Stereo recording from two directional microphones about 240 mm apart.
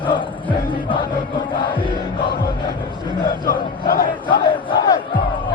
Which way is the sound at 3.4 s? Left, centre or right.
Left.